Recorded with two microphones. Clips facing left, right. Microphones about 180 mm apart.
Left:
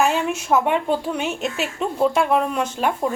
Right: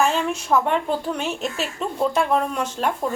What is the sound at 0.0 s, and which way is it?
A woman's voice, 5° left (ahead or behind).